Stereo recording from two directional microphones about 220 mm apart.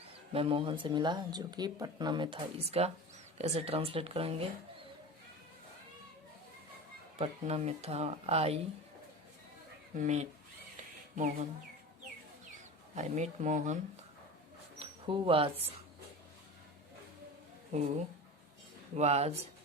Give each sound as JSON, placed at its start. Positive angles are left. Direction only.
{"t": 0.3, "sound": "speech", "side_deg": -25}
{"t": 7.2, "sound": "speech", "side_deg": -30}
{"t": 10.0, "sound": "speech", "side_deg": -30}
{"t": 13.0, "sound": "speech", "side_deg": -30}
{"t": 14.8, "sound": "speech", "side_deg": -25}
{"t": 18.9, "sound": "speech", "side_deg": -30}